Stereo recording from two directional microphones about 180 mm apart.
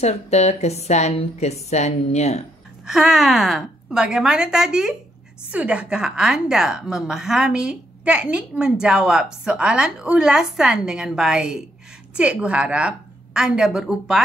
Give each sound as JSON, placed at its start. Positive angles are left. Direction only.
{"t": 0.0, "sound": "a woman's voice", "side_deg": 35}
{"t": 2.8, "sound": "a woman's voice", "side_deg": -5}